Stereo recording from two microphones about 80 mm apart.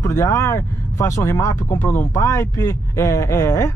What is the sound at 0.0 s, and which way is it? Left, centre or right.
Speech, left.